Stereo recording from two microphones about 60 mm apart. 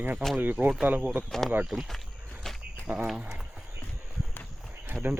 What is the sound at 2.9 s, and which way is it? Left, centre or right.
Speech, right.